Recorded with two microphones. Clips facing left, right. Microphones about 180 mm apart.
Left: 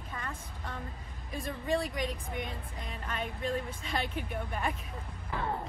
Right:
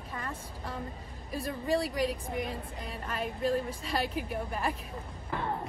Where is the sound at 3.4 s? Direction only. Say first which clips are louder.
Right 6 dB; 35° right (ahead or behind).